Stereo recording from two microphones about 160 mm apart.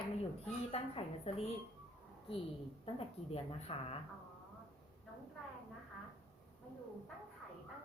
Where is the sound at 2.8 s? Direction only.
40° left (ahead or behind).